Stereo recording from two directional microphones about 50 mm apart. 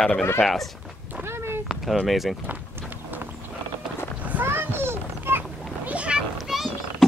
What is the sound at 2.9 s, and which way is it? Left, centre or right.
Clip-clop, right.